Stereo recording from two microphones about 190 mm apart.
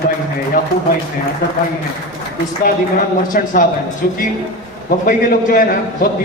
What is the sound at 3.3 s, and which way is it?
A man's voice, 50° left (ahead or behind).